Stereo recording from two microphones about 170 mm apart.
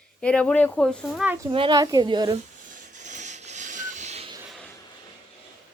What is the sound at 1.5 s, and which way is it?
Speech, 25° right (ahead or behind).